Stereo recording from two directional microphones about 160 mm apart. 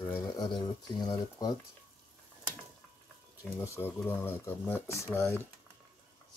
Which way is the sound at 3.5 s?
15° left (ahead or behind).